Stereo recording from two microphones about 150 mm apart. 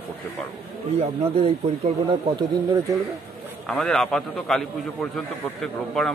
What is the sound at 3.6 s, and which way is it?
A man's voice, 5° left (ahead or behind).